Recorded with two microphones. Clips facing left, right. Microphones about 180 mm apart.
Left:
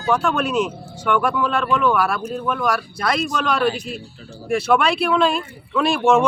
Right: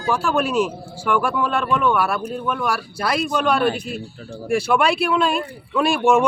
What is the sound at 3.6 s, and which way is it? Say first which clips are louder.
Speech: even; 55° right (ahead or behind).